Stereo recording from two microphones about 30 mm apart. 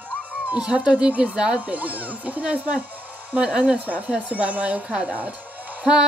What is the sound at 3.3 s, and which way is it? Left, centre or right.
Speech, right.